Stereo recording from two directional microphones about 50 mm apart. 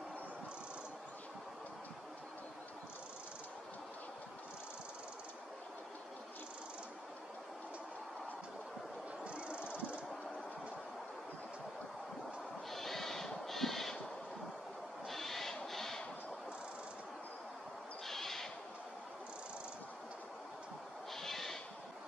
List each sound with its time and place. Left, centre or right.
9.2 s a sound: right
12.7 s music: centre
15.0 s owl: centre
18.0 s owl: centre
21.1 s owl: centre